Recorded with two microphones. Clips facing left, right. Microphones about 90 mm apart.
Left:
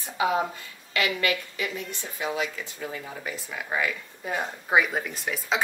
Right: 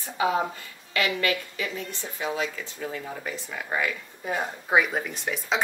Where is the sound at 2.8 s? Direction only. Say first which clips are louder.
Right 2 dB; centre (ahead or behind).